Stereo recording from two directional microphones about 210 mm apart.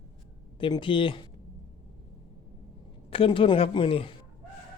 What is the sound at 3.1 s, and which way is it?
Speech, 25° left (ahead or behind).